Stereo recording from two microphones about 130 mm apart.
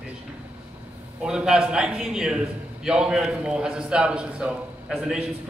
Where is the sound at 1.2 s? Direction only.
5° right (ahead or behind).